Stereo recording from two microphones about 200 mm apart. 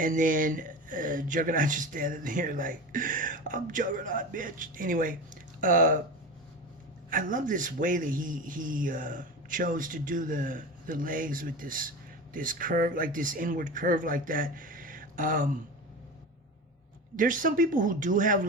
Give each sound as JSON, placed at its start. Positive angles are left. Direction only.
{"t": 0.0, "sound": "speech", "side_deg": -40}
{"t": 7.1, "sound": "a man's voice", "side_deg": -40}
{"t": 17.2, "sound": "speech", "side_deg": -40}